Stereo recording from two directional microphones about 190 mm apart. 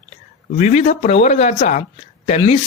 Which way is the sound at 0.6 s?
35° left (ahead or behind).